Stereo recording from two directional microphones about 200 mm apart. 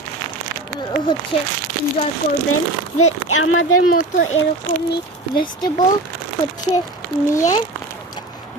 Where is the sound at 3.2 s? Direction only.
90° left.